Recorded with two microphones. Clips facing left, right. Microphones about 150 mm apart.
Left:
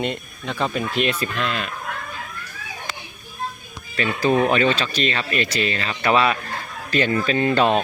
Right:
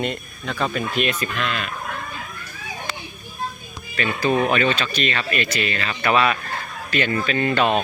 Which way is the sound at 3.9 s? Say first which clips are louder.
Left 1 dB; 30° left (ahead or behind).